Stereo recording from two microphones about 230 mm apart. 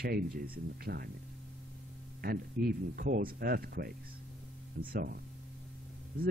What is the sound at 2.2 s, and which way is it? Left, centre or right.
Speech, right.